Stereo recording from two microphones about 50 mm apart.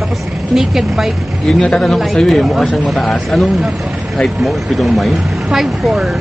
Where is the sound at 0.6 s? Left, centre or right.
Centre.